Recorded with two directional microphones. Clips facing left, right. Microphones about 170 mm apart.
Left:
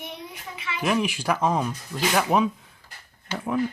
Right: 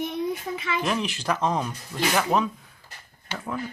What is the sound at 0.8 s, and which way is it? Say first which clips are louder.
Speech: left 7 dB; 5° left (ahead or behind).